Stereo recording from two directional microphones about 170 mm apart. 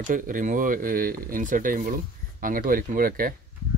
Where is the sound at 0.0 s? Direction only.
50° right (ahead or behind).